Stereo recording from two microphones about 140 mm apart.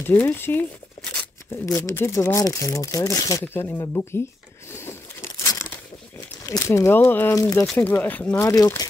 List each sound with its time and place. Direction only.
0.0 s speech: 15° left (ahead or behind)
5.4 s crumpling: 20° left (ahead or behind)
6.4 s speech: 20° left (ahead or behind)